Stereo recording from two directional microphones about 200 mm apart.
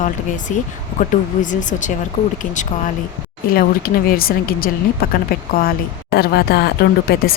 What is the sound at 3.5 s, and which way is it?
Speech, 45° left (ahead or behind).